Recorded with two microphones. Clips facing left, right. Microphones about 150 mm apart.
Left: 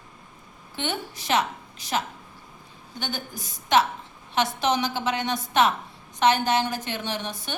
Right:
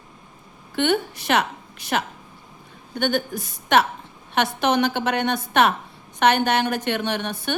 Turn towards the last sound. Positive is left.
turn(degrees=-60)  # may be behind; listen again after turning